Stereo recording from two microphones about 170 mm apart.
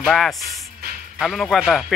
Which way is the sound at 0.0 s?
Centre (ahead or behind).